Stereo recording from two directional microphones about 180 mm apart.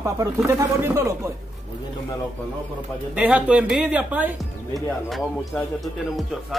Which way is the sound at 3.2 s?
10° right (ahead or behind).